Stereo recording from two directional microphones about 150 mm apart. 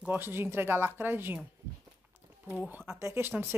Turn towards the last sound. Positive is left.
turn(degrees=-15)  # may be behind; listen again after turning